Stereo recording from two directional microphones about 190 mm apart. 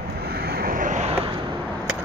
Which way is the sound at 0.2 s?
55° right (ahead or behind).